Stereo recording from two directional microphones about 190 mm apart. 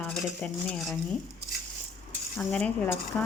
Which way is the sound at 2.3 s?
5° left (ahead or behind).